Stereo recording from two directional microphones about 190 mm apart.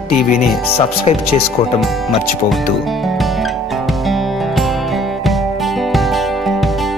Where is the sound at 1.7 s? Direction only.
Centre (ahead or behind).